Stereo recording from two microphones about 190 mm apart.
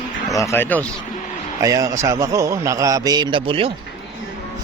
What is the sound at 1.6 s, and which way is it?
A man's voice, 15° right (ahead or behind).